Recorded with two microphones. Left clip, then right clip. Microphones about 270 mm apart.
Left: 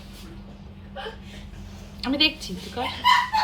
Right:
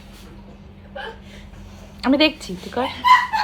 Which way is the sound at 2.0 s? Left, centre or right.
Centre.